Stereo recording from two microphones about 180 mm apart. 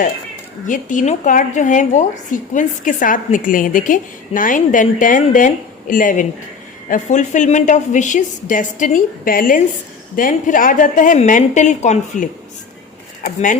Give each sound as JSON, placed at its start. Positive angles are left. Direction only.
{"t": 0.7, "sound": "a woman's voice", "side_deg": 45}